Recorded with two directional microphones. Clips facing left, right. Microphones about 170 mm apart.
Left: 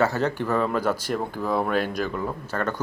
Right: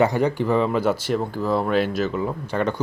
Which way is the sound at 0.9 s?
10° left (ahead or behind).